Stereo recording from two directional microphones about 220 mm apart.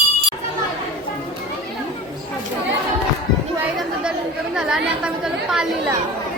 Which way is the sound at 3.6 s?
5° right (ahead or behind).